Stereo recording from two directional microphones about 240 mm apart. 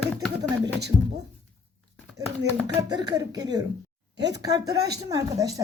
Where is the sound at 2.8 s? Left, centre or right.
Centre.